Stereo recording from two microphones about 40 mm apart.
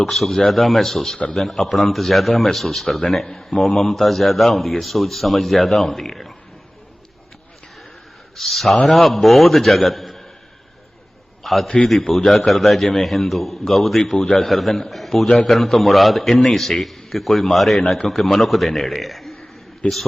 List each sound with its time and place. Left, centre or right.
0.0 s speech: centre
8.4 s speech: centre
11.4 s a man's voice: centre
14.3 s speech: centre
19.8 s a man's voice: left